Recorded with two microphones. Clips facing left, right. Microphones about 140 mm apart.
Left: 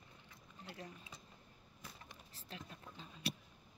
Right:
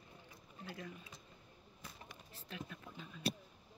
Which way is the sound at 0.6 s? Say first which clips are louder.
Right 3 dB; 35° left (ahead or behind).